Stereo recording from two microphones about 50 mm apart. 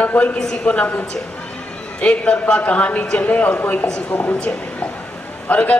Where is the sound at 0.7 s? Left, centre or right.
Left.